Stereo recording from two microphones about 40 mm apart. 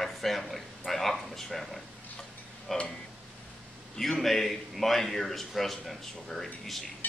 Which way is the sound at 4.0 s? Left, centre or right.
Centre.